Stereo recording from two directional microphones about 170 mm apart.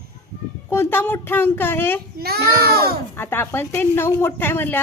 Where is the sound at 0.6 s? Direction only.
15° left (ahead or behind).